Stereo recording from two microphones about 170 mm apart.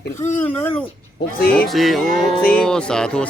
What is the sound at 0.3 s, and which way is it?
Speech, 10° left (ahead or behind).